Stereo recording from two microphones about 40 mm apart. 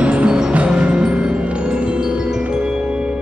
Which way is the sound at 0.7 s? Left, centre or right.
Right.